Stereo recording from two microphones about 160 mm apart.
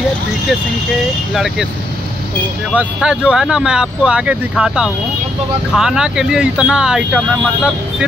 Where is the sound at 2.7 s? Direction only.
5° right (ahead or behind).